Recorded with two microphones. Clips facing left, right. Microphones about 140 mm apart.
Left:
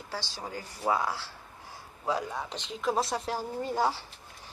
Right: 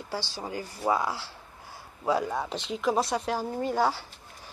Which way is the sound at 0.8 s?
10° right (ahead or behind).